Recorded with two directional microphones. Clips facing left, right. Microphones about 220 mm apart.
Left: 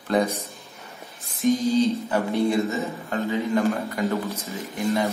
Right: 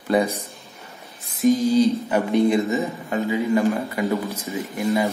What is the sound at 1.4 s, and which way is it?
Speech, 10° right (ahead or behind).